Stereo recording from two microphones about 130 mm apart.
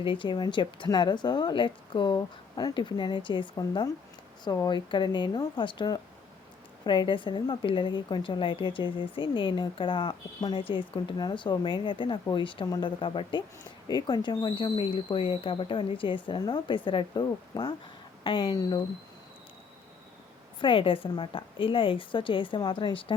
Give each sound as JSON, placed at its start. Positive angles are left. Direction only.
{"t": 0.0, "sound": "a woman's voice", "side_deg": 40}
{"t": 20.6, "sound": "a woman's voice", "side_deg": 40}